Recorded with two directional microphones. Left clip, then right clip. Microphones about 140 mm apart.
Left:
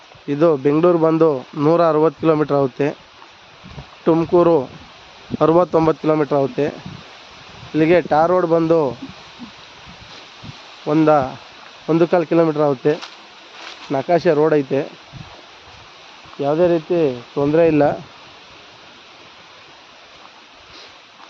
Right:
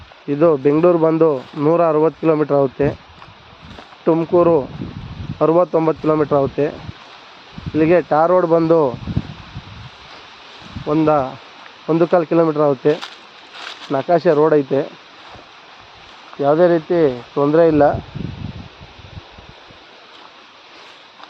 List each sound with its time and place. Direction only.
0.3 s speech: 5° left (ahead or behind)
4.3 s speech: 25° left (ahead or behind)
6.1 s speech: 15° left (ahead or behind)
7.8 s speech: 20° left (ahead or behind)
8.1 s speech: 5° left (ahead or behind)
10.8 s speech: 30° left (ahead or behind)
16.4 s speech: 10° right (ahead or behind)
17.4 s speech: 10° left (ahead or behind)
17.7 s speech: 20° left (ahead or behind)